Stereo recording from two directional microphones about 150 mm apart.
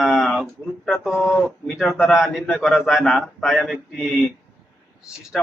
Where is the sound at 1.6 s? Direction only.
Centre (ahead or behind).